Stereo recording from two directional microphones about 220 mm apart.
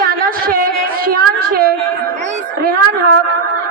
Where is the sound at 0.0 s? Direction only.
40° right (ahead or behind).